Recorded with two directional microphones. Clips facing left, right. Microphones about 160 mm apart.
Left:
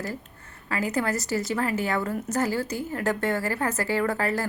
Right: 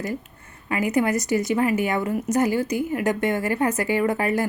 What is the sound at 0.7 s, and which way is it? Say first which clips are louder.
Speech: right 5 dB; 15° right (ahead or behind).